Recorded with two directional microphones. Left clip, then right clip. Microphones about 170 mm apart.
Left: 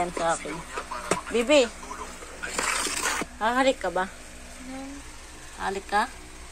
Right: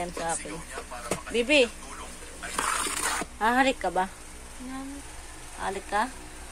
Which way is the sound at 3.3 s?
30° right (ahead or behind).